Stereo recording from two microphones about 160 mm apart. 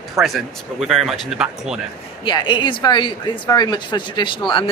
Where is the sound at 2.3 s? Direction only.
30° left (ahead or behind).